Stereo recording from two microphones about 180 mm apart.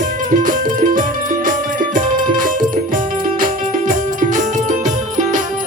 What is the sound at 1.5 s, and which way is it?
Music, 45° right (ahead or behind).